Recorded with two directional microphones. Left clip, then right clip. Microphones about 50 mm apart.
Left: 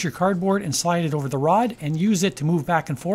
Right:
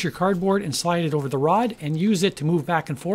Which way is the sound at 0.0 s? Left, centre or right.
Centre.